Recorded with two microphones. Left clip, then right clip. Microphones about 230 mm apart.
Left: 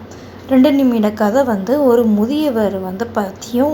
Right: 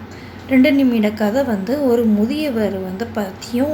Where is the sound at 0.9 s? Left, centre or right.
Centre.